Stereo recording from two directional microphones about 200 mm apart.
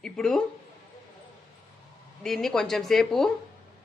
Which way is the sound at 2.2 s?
Centre (ahead or behind).